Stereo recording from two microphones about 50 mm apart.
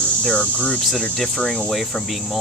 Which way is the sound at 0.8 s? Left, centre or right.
Centre.